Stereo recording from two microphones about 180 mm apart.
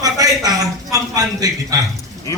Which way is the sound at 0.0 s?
20° right (ahead or behind).